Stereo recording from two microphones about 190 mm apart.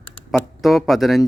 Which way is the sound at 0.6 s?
Centre (ahead or behind).